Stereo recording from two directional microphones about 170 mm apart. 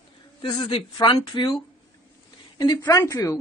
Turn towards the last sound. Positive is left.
turn(degrees=20)  # may be behind; listen again after turning